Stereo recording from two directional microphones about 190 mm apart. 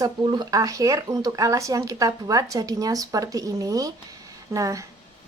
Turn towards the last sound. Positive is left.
turn(degrees=-15)  # may be behind; listen again after turning